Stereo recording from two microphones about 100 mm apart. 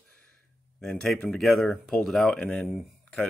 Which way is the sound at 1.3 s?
Centre (ahead or behind).